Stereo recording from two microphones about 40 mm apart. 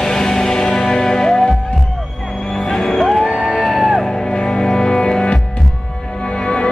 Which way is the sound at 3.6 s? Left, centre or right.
Centre.